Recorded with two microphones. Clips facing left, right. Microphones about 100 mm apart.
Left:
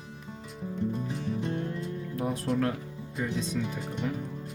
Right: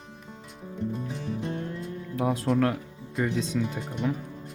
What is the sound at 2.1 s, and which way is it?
Speech, 90° right.